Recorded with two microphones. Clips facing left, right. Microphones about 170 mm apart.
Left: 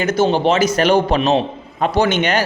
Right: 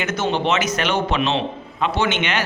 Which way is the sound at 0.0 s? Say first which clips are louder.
Left 6 dB; 35° left (ahead or behind).